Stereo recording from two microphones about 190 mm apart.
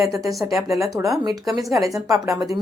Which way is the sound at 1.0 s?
10° right (ahead or behind).